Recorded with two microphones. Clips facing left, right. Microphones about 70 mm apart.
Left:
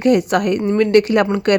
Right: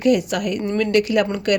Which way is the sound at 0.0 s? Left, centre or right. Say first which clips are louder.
Left 4 dB; left.